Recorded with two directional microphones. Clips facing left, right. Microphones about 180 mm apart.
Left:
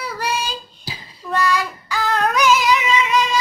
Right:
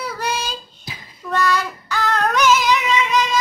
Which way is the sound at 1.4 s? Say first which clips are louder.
Even; centre (ahead or behind).